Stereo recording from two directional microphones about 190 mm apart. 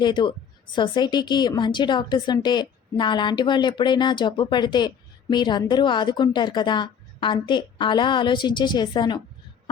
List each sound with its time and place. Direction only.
0.0 s a woman's voice: 25° left (ahead or behind)